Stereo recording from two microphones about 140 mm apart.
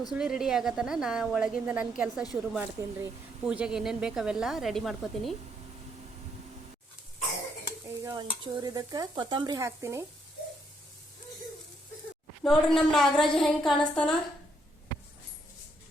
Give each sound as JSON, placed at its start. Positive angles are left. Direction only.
{"t": 0.1, "sound": "speech", "side_deg": -5}
{"t": 7.9, "sound": "stir", "side_deg": -25}
{"t": 12.4, "sound": "speech", "side_deg": 5}